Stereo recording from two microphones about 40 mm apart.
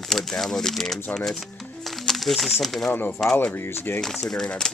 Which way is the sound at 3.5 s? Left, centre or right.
Left.